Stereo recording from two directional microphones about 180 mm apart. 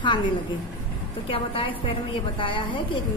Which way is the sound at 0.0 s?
25° left (ahead or behind).